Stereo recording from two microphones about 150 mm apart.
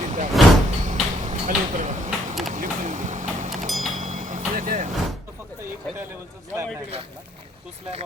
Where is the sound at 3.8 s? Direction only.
55° right (ahead or behind).